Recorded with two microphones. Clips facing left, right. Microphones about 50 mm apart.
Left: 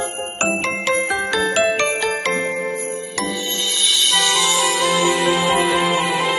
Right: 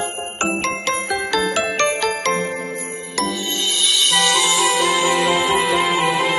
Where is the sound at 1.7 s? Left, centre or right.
Centre.